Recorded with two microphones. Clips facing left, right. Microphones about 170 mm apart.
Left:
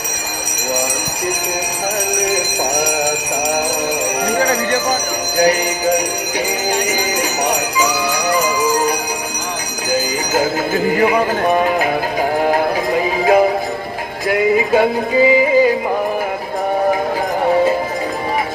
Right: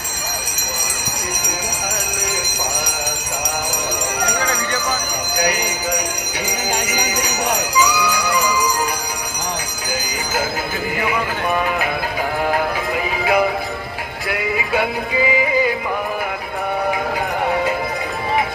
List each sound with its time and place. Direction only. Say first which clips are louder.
4.4 s jingle bell: left 6 dB; 40° left (ahead or behind)
10.9 s clip-clop: left 6 dB; 40° left (ahead or behind)
12.5 s music: left 4 dB; 40° left (ahead or behind)